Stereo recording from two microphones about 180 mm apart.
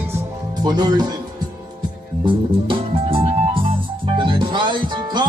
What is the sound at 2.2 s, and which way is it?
Music, 30° right (ahead or behind).